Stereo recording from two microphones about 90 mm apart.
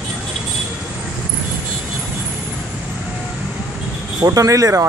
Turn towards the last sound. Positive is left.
turn(degrees=-35)  # may be behind; listen again after turning